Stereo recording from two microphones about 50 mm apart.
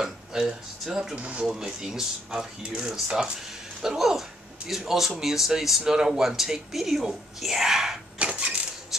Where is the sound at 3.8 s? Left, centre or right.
Centre.